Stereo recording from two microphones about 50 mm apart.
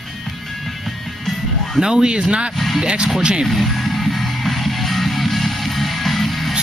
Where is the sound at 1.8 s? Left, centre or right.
Centre.